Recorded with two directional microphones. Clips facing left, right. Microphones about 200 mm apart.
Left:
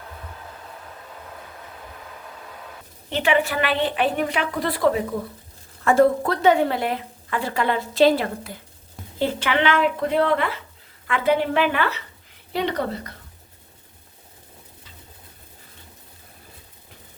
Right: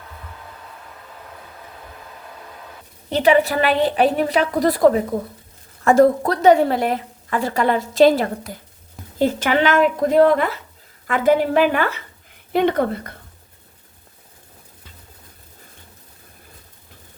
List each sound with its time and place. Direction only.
3.1 s a woman's voice: 40° right (ahead or behind)